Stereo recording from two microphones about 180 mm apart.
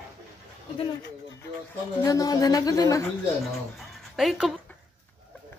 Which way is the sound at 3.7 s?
Centre (ahead or behind).